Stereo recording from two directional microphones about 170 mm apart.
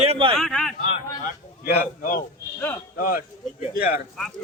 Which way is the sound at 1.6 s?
55° left (ahead or behind).